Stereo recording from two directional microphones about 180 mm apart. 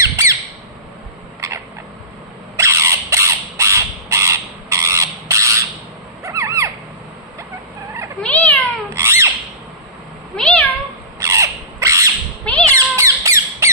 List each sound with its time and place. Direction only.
0.0 s squawk: 15° right (ahead or behind)
1.4 s a sound: 15° right (ahead or behind)
2.5 s crow: 15° right (ahead or behind)
6.2 s a sound: 15° right (ahead or behind)
8.2 s cat: 10° left (ahead or behind)
8.9 s squawk: 15° right (ahead or behind)
10.3 s cat: 5° left (ahead or behind)
11.1 s crow: 15° right (ahead or behind)
12.6 s squawk: 15° right (ahead or behind)